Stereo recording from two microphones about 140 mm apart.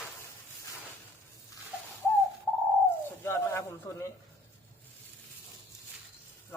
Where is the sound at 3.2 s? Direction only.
20° left (ahead or behind).